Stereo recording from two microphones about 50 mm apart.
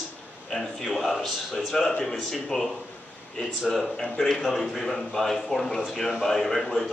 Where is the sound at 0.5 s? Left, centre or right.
Centre.